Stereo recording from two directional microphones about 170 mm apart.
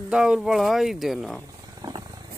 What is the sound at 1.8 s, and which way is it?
Wild animals, 20° right (ahead or behind).